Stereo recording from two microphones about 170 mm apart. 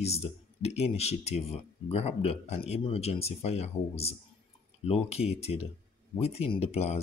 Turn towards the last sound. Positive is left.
turn(degrees=40)  # may be behind; listen again after turning